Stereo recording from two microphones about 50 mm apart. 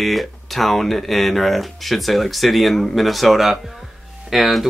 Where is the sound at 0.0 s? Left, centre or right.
Centre.